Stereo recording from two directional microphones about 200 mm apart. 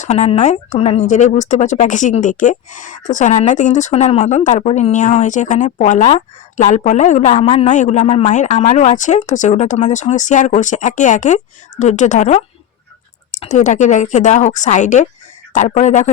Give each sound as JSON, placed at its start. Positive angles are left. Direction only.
{"t": 0.0, "sound": "speech", "side_deg": 35}